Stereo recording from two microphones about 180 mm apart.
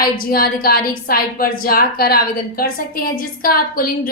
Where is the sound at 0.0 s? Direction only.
55° left (ahead or behind).